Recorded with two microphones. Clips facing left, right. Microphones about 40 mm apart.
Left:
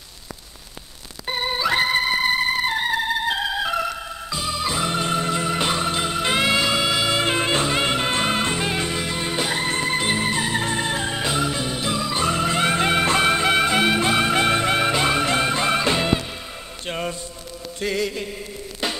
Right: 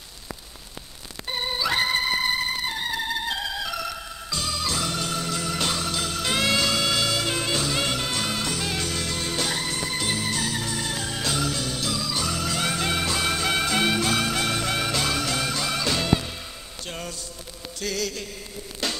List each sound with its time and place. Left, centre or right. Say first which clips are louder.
1.2 s music: left 4 dB; left
7.2 s music: left 5 dB; left
9.7 s music: left 6 dB; left
16.8 s a sound: left 7 dB; left
17.7 s mantra: left 5 dB; left
18.8 s music: left 3 dB; left